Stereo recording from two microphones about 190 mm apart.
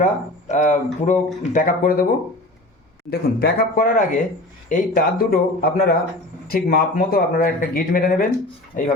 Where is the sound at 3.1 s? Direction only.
50° left (ahead or behind).